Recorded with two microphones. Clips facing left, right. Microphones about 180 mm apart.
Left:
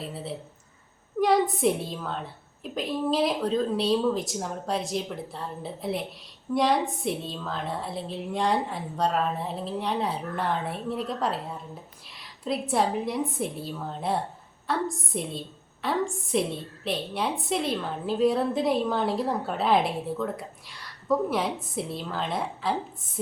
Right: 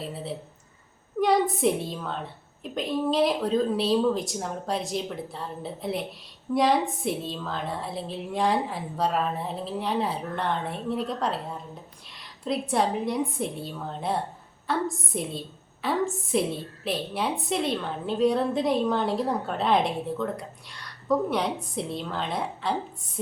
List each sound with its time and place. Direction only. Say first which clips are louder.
0.0 s a woman's voice: right 1 dB; centre (ahead or behind)